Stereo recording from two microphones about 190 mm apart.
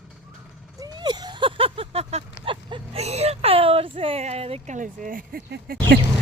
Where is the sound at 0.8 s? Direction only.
20° right (ahead or behind); by 5.7 s 50° right (ahead or behind).